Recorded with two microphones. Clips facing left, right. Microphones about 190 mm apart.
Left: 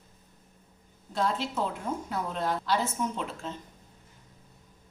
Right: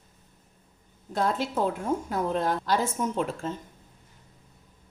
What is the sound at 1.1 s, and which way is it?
A woman's voice, 50° right (ahead or behind).